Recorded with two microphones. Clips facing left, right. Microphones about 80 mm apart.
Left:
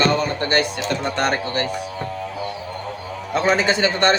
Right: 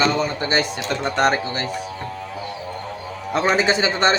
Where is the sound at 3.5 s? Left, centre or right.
Centre.